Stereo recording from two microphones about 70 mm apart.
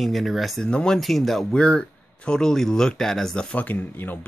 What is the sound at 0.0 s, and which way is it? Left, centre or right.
Speech, centre.